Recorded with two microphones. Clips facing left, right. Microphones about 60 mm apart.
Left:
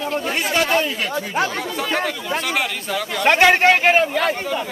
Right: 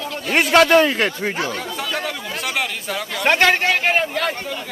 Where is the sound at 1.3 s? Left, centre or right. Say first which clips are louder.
Left 3 dB; left.